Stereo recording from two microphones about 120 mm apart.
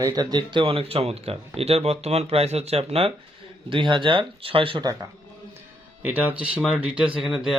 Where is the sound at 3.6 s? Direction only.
45° right (ahead or behind).